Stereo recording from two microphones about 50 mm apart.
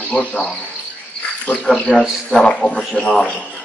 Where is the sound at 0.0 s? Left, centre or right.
Left.